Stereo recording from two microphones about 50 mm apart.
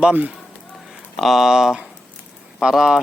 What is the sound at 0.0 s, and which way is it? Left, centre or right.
Speech, right.